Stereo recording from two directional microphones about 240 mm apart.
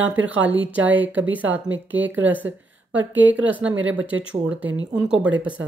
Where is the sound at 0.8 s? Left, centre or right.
Centre.